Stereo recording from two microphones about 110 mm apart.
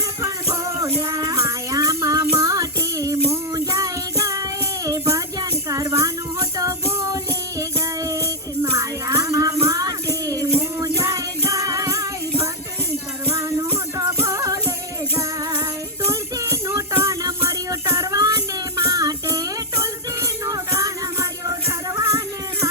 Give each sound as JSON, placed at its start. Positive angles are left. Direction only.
{"t": 0.2, "sound": "music", "side_deg": -30}
{"t": 13.3, "sound": "music", "side_deg": -25}
{"t": 16.0, "sound": "music", "side_deg": -25}